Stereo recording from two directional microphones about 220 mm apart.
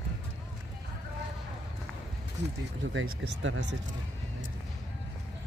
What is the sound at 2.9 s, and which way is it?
Speech, 60° right (ahead or behind).